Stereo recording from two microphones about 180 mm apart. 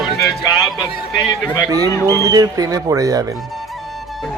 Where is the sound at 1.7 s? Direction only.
20° right (ahead or behind).